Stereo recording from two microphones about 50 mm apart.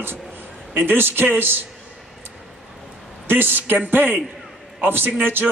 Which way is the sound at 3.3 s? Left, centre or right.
Right.